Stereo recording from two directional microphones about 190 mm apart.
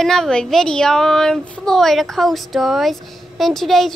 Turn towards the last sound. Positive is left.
turn(degrees=0)  # may be behind; listen again after turning